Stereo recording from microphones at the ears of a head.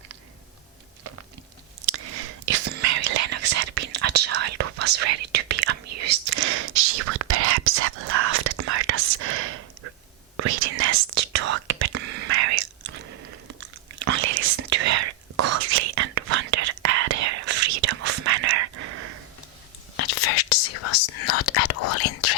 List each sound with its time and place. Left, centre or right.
1.8 s whispering: right
20.0 s whispering: left